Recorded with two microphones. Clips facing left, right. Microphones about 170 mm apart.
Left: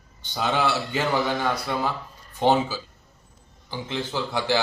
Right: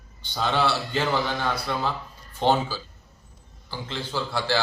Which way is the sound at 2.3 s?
15° left (ahead or behind).